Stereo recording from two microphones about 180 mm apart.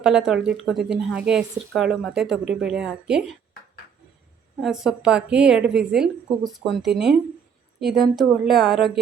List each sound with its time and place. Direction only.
0.0 s speech: 5° right (ahead or behind)
4.6 s speech: 5° right (ahead or behind)